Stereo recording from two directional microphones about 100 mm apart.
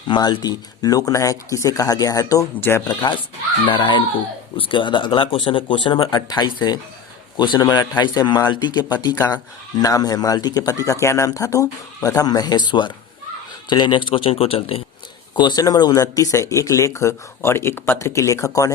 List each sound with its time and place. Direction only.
0.1 s a man's voice: 45° left (ahead or behind)
2.6 s speech: 20° left (ahead or behind)
2.8 s speech: 45° left (ahead or behind)
6.1 s a man's voice: 40° left (ahead or behind); by 14.8 s 70° left (ahead or behind)
15.4 s a man's voice: 45° left (ahead or behind)